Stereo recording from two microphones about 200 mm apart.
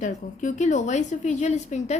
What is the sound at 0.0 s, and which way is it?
A woman's voice, 40° left (ahead or behind).